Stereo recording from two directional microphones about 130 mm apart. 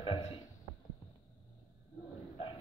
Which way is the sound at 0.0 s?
45° left (ahead or behind).